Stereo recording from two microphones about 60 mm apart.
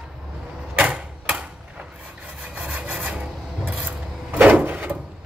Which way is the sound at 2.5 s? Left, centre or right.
Right.